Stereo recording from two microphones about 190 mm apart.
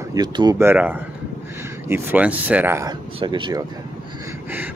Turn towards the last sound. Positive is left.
turn(degrees=-25)  # may be behind; listen again after turning